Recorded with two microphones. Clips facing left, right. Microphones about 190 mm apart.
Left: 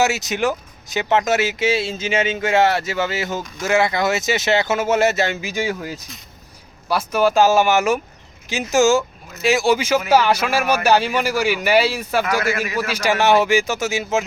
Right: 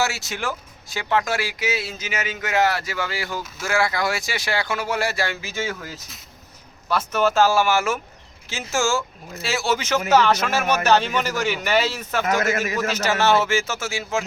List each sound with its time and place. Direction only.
0.0 s speech: 20° left (ahead or behind)